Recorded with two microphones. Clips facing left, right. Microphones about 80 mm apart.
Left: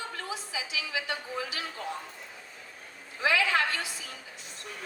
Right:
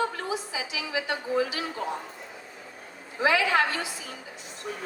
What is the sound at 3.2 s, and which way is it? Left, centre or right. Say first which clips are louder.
Speech: right 3 dB; right.